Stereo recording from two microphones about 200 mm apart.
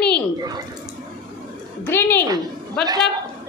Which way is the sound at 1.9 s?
10° left (ahead or behind).